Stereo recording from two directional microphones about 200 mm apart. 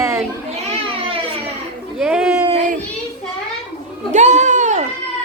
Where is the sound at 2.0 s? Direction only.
5° right (ahead or behind).